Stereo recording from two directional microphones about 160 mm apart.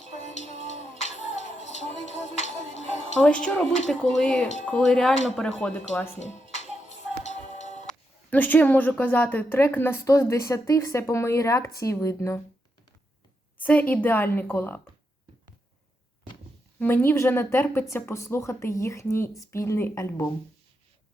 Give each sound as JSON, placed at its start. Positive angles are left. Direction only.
{"t": 0.0, "sound": "music", "side_deg": 45}
{"t": 0.7, "sound": "a sound", "side_deg": 45}
{"t": 3.2, "sound": "a woman's voice", "side_deg": 5}
{"t": 6.1, "sound": "music", "side_deg": 45}
{"t": 7.9, "sound": "a woman's voice", "side_deg": 10}
{"t": 13.6, "sound": "a woman's voice", "side_deg": 10}
{"t": 16.8, "sound": "a woman's voice", "side_deg": 15}